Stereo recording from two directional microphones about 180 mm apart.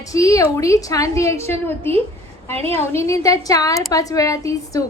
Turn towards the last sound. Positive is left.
turn(degrees=20)  # may be behind; listen again after turning